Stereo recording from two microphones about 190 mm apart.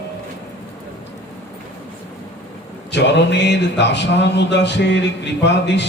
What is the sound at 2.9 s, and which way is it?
Speech, 65° left (ahead or behind).